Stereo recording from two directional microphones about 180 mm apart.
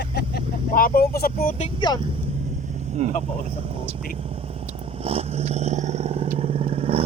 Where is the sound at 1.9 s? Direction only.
30° right (ahead or behind).